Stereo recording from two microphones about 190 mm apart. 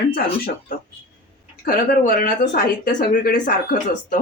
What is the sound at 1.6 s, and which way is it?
Speech, 45° left (ahead or behind).